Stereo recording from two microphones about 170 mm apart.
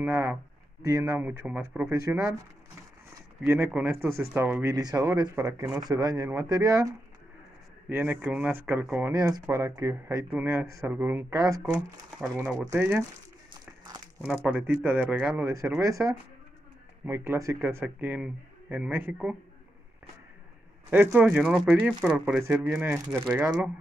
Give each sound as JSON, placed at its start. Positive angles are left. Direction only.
{"t": 0.0, "sound": "speech", "side_deg": -15}
{"t": 3.4, "sound": "speech", "side_deg": -15}
{"t": 7.9, "sound": "speech", "side_deg": -10}
{"t": 13.5, "sound": "a sound", "side_deg": -20}
{"t": 14.2, "sound": "speech", "side_deg": -10}
{"t": 20.9, "sound": "speech", "side_deg": -10}